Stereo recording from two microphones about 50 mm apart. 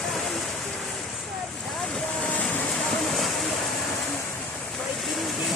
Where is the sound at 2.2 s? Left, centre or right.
Left.